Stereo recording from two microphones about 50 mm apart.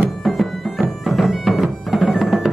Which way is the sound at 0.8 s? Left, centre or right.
Centre.